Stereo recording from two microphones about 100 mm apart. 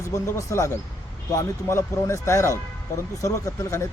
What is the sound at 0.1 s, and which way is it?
Speech, 30° left (ahead or behind).